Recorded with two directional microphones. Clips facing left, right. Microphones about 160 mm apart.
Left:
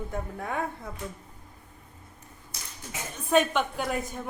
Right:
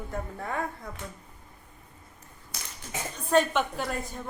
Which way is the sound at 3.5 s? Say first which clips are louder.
Left 1 dB; centre (ahead or behind).